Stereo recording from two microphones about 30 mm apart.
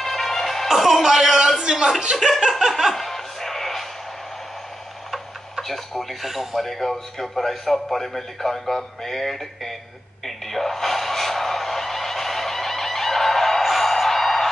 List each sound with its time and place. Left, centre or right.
0.0 s music: centre
0.7 s music: centre
1.6 s a sound: right
2.1 s speech: right
2.9 s music: centre
5.1 s tick-tock: centre
6.2 s a man's voice: centre
6.6 s a man's voice: centre
8.7 s music: centre
10.2 s a sound: centre
13.7 s music: centre